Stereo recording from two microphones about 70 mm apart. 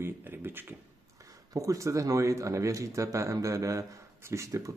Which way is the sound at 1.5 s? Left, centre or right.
Right.